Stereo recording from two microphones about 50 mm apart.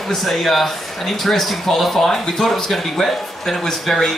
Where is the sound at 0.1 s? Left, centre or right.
Centre.